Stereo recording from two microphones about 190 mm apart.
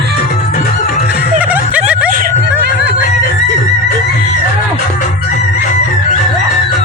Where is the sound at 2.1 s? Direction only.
50° right (ahead or behind).